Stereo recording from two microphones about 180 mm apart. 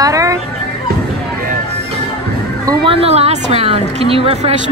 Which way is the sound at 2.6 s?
30° right (ahead or behind).